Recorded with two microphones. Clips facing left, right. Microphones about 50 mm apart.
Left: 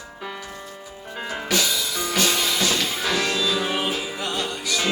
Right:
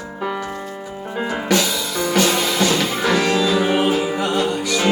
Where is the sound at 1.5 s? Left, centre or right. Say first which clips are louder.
Right 3 dB; centre.